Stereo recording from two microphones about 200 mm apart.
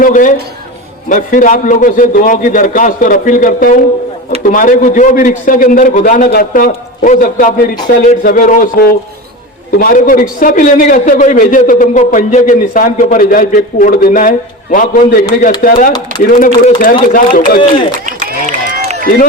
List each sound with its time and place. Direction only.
0.0 s a man's voice: 40° left (ahead or behind)
18.0 s run: 45° right (ahead or behind)
19.0 s a man's voice: 45° left (ahead or behind)